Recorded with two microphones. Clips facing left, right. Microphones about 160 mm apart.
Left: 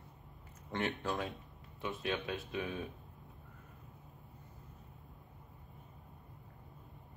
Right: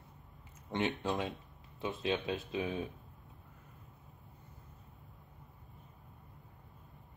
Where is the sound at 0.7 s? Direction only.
20° right (ahead or behind).